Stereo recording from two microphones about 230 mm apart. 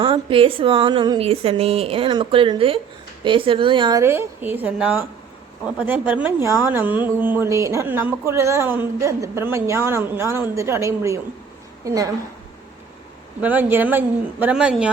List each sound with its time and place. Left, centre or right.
0.0 s a woman's voice: right
13.4 s a woman's voice: centre